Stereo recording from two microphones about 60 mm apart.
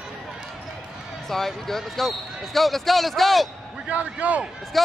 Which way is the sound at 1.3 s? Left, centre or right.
Centre.